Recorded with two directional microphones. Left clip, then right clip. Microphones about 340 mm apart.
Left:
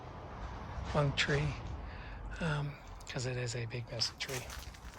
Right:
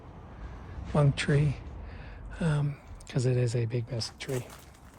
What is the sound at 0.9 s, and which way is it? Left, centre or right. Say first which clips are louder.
Speech: right 4 dB; centre.